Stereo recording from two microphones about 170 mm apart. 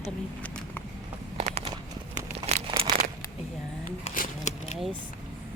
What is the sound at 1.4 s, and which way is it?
Clip-clop, 40° right (ahead or behind).